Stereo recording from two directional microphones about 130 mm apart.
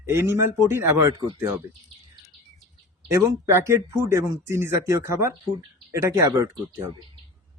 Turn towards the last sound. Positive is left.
turn(degrees=-25)  # may be behind; listen again after turning